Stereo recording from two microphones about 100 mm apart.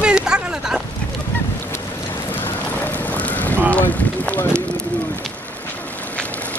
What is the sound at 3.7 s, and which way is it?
Speech, 15° left (ahead or behind).